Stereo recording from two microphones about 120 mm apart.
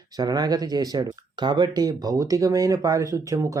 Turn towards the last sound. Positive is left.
turn(degrees=-25)  # may be behind; listen again after turning